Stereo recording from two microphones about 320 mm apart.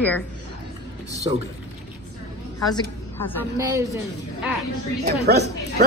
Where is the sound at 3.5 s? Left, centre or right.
Centre.